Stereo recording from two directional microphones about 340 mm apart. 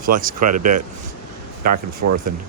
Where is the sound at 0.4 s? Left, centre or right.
Right.